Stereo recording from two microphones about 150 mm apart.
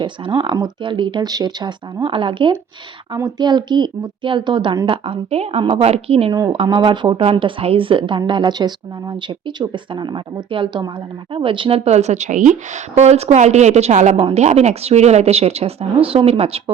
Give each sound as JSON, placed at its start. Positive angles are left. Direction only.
{"t": 0.0, "sound": "speech", "side_deg": -35}